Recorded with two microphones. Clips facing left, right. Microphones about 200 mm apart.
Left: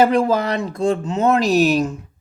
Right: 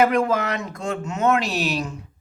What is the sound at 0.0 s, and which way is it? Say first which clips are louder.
Speech: left 3 dB; 30° left (ahead or behind).